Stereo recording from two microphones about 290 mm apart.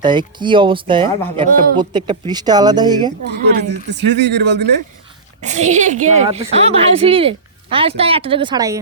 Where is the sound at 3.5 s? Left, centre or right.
Right.